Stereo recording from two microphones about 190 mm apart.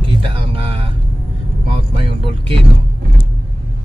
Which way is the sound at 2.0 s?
25° right (ahead or behind).